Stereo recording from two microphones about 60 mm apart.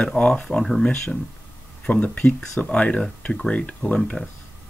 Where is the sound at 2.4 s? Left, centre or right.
Centre.